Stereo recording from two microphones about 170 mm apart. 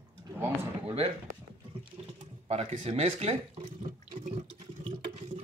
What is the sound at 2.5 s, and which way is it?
Speech, 40° right (ahead or behind).